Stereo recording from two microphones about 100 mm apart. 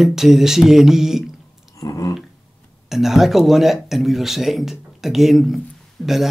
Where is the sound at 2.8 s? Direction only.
5° right (ahead or behind).